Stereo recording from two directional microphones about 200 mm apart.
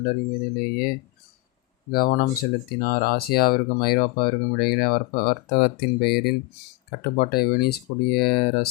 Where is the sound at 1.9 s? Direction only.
45° left (ahead or behind).